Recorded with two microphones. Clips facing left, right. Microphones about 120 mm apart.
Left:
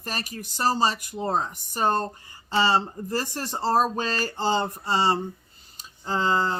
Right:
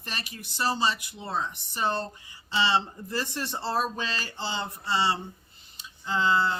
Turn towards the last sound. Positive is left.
turn(degrees=40)  # may be behind; listen again after turning